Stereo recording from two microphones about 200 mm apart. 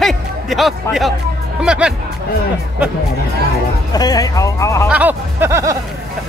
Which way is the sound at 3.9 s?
20° left (ahead or behind).